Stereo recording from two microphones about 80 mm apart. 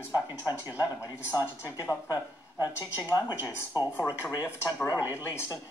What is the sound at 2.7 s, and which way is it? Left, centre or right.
Speech, left.